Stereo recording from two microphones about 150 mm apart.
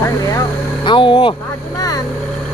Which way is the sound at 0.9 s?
35° left (ahead or behind).